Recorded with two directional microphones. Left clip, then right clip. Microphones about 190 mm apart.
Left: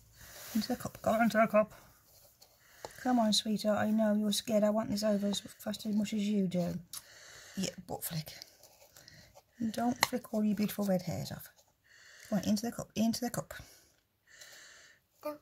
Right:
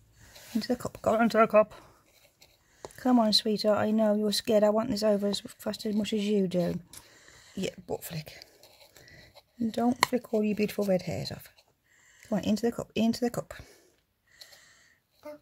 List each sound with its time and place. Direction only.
0.6 s speech: 40° right (ahead or behind)
3.0 s speech: 40° right (ahead or behind)
7.2 s a sound: 25° left (ahead or behind)
7.5 s speech: 35° right (ahead or behind)
8.9 s a sound: 30° right (ahead or behind)
9.7 s speech: 30° right (ahead or behind)